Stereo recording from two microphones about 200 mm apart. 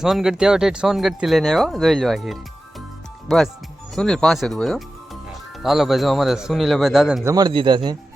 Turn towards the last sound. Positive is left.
turn(degrees=-20)  # may be behind; listen again after turning